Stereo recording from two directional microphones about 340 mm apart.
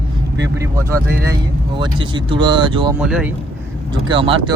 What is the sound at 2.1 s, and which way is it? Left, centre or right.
Speech, centre.